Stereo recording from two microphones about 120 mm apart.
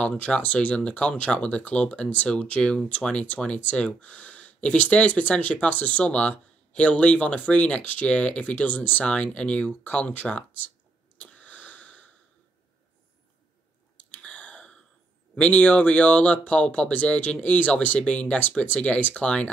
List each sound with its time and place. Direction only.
0.0 s speech: 10° left (ahead or behind)
11.1 s sniff: 10° left (ahead or behind)
13.9 s a sound: 10° left (ahead or behind)
15.4 s speech: 10° left (ahead or behind)